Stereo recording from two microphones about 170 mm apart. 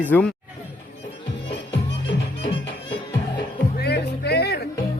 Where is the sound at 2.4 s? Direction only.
30° left (ahead or behind).